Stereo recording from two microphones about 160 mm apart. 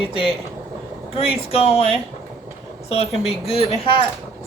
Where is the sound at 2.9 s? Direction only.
40° left (ahead or behind).